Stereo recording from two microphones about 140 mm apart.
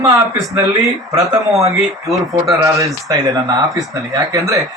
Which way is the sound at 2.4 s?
20° right (ahead or behind).